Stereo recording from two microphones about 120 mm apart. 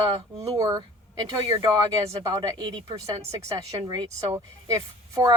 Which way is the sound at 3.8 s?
35° right (ahead or behind).